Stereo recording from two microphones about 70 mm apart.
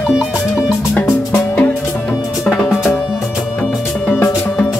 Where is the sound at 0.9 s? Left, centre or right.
Left.